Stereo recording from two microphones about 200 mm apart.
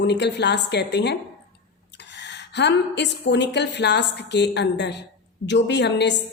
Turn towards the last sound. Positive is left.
turn(degrees=60)  # may be behind; listen again after turning